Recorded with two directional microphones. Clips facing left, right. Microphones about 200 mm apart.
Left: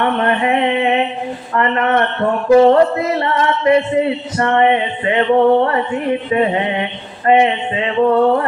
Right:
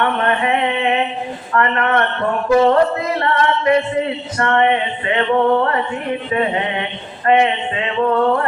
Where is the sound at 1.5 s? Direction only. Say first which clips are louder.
Left 1 dB; 25° left (ahead or behind).